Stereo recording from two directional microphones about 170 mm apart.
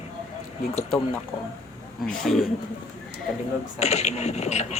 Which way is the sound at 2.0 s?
Centre (ahead or behind).